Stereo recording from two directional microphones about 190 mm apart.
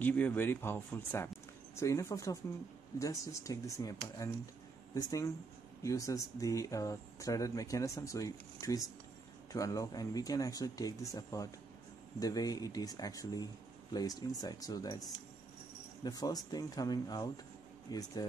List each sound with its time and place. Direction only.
0.0 s speech: 10° left (ahead or behind)